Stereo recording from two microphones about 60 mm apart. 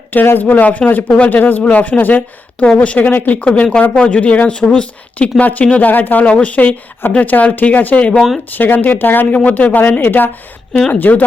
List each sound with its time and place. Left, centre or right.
0.1 s speech: left
1.0 s speech: centre
1.3 s speech: left
8.5 s speech: left